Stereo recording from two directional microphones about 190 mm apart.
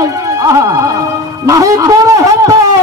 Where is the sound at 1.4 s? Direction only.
15° right (ahead or behind).